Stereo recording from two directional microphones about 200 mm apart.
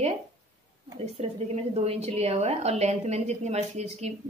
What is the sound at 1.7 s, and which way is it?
A woman's voice, 30° right (ahead or behind).